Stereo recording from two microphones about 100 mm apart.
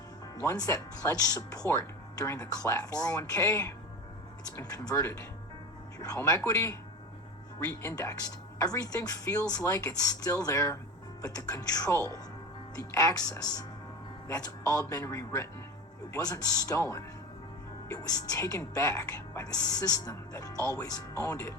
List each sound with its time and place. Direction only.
0.3 s speech: 35° left (ahead or behind)
6.4 s speech: 25° left (ahead or behind)